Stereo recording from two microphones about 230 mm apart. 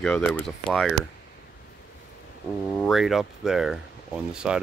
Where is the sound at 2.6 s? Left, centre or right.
Centre.